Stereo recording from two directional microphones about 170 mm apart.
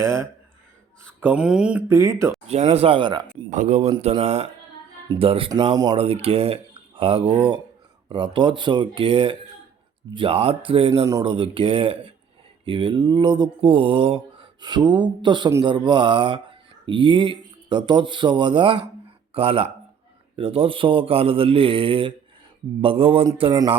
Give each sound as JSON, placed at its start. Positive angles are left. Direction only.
{"t": 0.0, "sound": "speech", "side_deg": -15}
{"t": 2.0, "sound": "speech", "side_deg": -20}
{"t": 2.5, "sound": "speech", "side_deg": -40}
{"t": 3.5, "sound": "speech", "side_deg": -45}
{"t": 5.7, "sound": "speech", "side_deg": -20}
{"t": 6.0, "sound": "speech", "side_deg": -35}